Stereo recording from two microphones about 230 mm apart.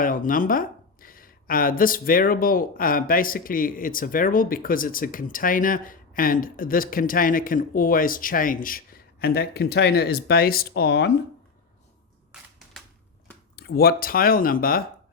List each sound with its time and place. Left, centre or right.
0.0 s speech: left
12.3 s a sound: centre
13.6 s speech: left